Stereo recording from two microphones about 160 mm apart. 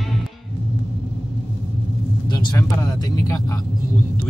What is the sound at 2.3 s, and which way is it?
Speech, 25° left (ahead or behind).